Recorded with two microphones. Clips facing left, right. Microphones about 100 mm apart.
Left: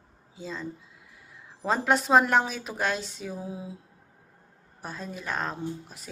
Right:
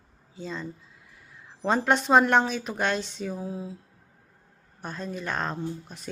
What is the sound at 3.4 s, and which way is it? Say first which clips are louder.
Speech: right 3 dB; 15° left (ahead or behind).